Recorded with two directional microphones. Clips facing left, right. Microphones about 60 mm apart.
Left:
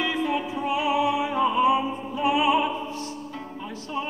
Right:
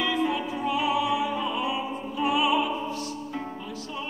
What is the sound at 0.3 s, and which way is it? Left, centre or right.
Music, left.